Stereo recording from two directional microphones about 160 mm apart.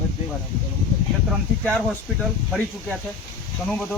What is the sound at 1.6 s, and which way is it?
Speech, 5° left (ahead or behind).